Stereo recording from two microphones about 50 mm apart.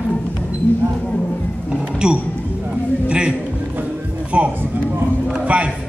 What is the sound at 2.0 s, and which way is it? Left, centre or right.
Speech, centre.